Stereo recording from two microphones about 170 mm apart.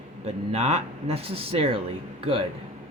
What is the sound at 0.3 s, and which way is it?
Speech, 40° right (ahead or behind).